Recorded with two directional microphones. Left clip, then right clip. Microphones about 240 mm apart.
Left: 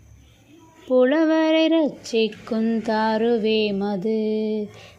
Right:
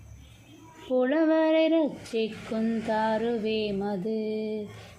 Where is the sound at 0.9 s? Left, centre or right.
Left.